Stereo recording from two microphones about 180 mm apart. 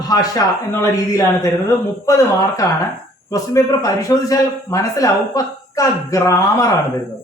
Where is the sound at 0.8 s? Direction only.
20° left (ahead or behind).